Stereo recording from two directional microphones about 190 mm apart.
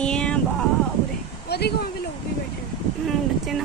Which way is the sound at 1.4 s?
60° left (ahead or behind).